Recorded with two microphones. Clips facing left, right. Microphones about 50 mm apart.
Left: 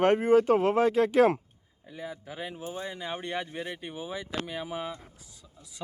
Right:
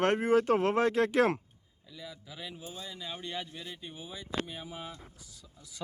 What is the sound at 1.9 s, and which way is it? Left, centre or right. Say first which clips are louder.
Speech: left 7 dB; left.